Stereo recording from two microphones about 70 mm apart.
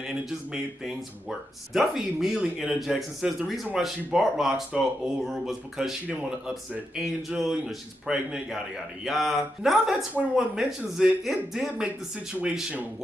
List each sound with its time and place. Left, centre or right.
0.2 s a man's voice: centre
6.0 s a man's voice: right
7.0 s a man's voice: centre